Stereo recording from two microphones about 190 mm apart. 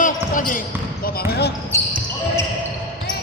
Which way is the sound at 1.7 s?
15° left (ahead or behind).